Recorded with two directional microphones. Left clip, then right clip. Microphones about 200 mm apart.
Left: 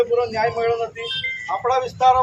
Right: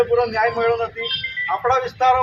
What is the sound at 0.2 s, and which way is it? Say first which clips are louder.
A man's voice: right 2 dB; 10° left (ahead or behind).